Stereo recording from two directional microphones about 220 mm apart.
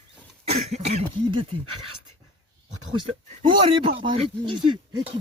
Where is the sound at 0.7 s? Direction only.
30° right (ahead or behind).